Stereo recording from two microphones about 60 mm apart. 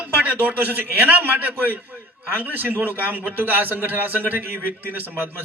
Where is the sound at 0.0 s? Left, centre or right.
Right.